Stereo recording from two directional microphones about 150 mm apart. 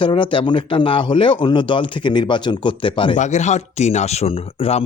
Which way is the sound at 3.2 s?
50° left (ahead or behind).